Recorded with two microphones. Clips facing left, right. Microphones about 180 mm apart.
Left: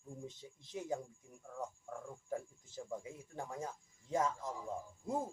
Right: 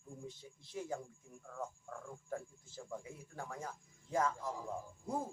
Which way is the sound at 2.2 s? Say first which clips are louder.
Left 2 dB; 20° left (ahead or behind).